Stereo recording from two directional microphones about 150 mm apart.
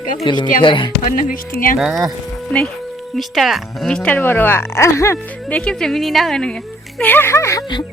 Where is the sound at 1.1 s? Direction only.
65° left (ahead or behind).